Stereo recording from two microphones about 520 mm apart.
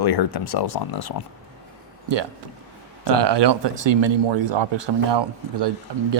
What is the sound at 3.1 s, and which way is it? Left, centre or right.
Speech, right.